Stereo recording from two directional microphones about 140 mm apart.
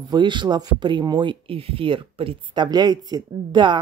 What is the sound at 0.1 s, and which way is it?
Speech, 35° right (ahead or behind).